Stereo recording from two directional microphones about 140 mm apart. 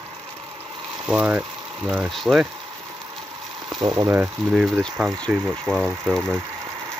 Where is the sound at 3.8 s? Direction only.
30° right (ahead or behind).